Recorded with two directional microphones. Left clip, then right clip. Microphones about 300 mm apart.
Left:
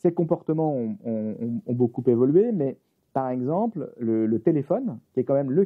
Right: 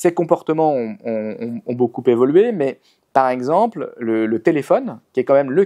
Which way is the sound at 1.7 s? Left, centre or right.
Right.